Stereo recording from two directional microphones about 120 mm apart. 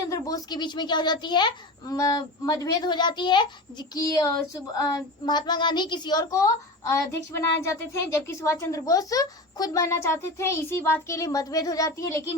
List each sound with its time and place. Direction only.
0.1 s a child's voice: 30° left (ahead or behind)